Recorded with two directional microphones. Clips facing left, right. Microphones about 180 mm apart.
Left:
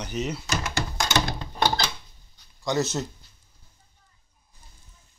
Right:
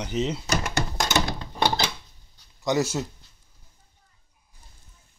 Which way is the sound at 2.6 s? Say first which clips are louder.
Right 2 dB; 15° right (ahead or behind).